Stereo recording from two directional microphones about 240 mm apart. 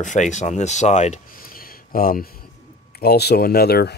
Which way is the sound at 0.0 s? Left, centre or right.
Left.